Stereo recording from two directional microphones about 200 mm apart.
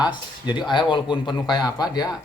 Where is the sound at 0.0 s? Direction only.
20° left (ahead or behind).